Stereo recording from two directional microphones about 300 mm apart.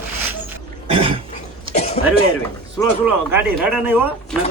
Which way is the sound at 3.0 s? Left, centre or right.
Centre.